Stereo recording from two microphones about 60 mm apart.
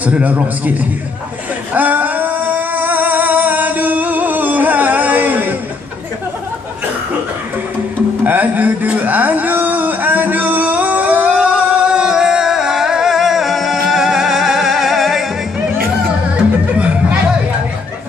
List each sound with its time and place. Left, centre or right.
0.0 s a man's voice: right
1.7 s singing: right
8.2 s a sound: right
11.2 s music: centre
16.7 s chatter: right